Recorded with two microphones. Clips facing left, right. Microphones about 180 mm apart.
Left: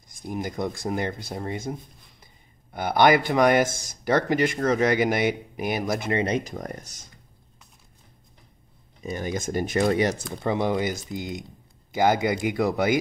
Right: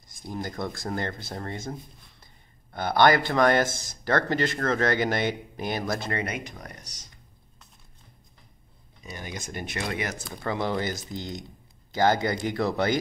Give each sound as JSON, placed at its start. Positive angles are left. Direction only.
{"t": 0.1, "sound": "speech", "side_deg": 15}
{"t": 6.2, "sound": "speech", "side_deg": 30}
{"t": 6.6, "sound": "speech", "side_deg": 50}
{"t": 9.1, "sound": "speech", "side_deg": 45}
{"t": 10.3, "sound": "speech", "side_deg": 20}